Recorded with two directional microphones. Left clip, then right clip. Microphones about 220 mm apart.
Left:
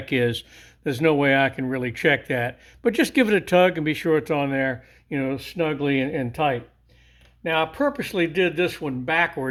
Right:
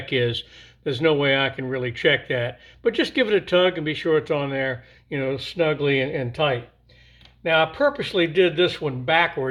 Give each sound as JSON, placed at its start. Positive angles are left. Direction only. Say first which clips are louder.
{"t": 0.0, "sound": "speech", "louder": "even", "side_deg": 45}